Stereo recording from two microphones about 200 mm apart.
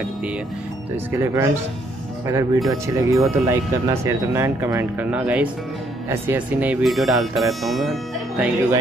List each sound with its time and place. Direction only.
1.1 s speech: 15° right (ahead or behind)